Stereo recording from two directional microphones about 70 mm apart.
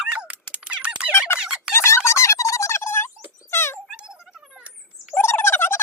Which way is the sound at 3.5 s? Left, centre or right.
Left.